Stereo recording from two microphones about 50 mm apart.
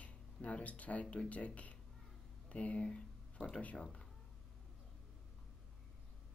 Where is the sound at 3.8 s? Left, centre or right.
Centre.